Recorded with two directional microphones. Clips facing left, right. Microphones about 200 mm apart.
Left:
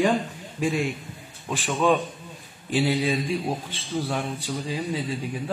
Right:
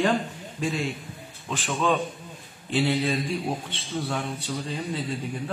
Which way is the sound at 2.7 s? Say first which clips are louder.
Left 1 dB; 10° left (ahead or behind).